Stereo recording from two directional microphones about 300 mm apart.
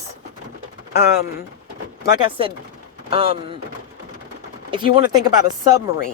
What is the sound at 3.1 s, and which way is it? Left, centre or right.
Speech, centre.